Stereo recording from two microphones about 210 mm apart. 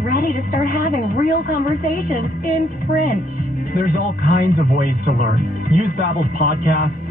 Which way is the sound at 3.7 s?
40° left (ahead or behind).